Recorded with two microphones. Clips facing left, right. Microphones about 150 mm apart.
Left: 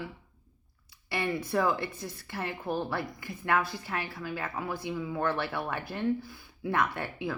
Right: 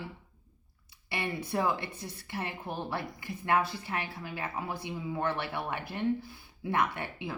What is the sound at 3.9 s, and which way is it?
Speech, 20° right (ahead or behind).